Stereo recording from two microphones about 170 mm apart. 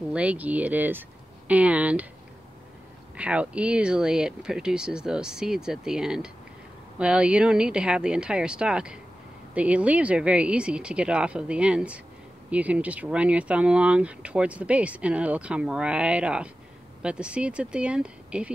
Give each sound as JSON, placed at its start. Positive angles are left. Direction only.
{"t": 0.1, "sound": "speech", "side_deg": -10}
{"t": 3.2, "sound": "speech", "side_deg": -5}